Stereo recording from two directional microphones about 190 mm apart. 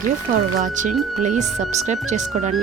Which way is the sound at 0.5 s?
40° right (ahead or behind).